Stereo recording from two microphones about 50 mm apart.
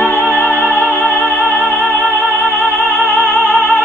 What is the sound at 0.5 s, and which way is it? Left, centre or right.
Music, right.